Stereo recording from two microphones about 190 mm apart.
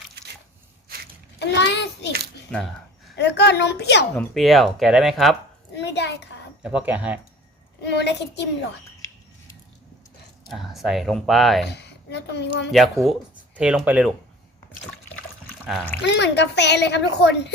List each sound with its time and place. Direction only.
1.4 s a sound: 65° left (ahead or behind)
2.5 s speech: 5° left (ahead or behind)
3.2 s a woman's voice: 60° left (ahead or behind)
4.2 s speech: centre (ahead or behind)
5.7 s a sound: 65° left (ahead or behind)
6.6 s speech: 5° right (ahead or behind)
7.8 s a woman's voice: 65° left (ahead or behind)
10.5 s speech: centre (ahead or behind)
11.7 s a woman's voice: 65° left (ahead or behind)
12.7 s speech: centre (ahead or behind)
16.0 s a woman's voice: 65° left (ahead or behind)